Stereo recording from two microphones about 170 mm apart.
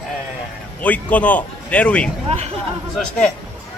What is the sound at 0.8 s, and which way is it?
A man's voice, 10° left (ahead or behind).